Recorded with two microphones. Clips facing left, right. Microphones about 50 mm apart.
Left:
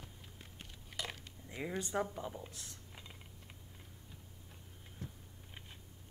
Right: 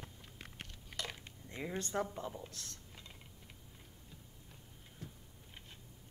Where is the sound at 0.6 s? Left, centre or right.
Centre.